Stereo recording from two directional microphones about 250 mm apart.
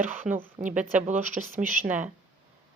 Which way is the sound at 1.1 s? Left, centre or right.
Centre.